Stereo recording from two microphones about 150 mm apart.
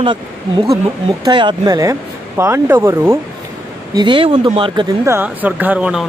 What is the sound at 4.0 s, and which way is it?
Speech, 35° right (ahead or behind).